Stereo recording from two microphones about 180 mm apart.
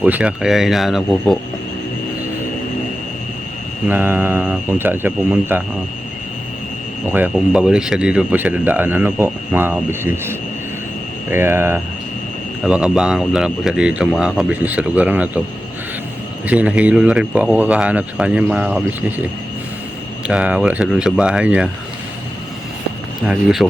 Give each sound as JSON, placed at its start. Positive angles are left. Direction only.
{"t": 0.0, "sound": "speech", "side_deg": -10}
{"t": 3.8, "sound": "speech", "side_deg": -10}
{"t": 7.1, "sound": "speech", "side_deg": -10}
{"t": 16.5, "sound": "speech", "side_deg": -5}
{"t": 20.2, "sound": "speech", "side_deg": -5}
{"t": 23.2, "sound": "speech", "side_deg": -5}